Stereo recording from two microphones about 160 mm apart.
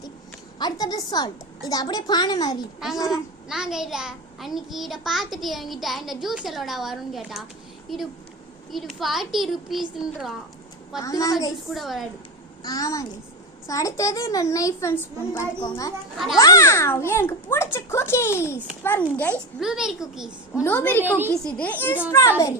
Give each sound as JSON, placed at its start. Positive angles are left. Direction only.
{"t": 0.6, "sound": "a child's voice", "side_deg": 25}
{"t": 3.1, "sound": "a child's voice", "side_deg": -5}
{"t": 11.0, "sound": "a child's voice", "side_deg": 20}
{"t": 11.7, "sound": "a child's voice", "side_deg": 0}
{"t": 12.6, "sound": "a child's voice", "side_deg": 20}
{"t": 16.1, "sound": "a child's voice", "side_deg": 0}
{"t": 16.4, "sound": "a child's voice", "side_deg": 20}
{"t": 19.5, "sound": "a child's voice", "side_deg": -5}
{"t": 20.7, "sound": "a child's voice", "side_deg": 10}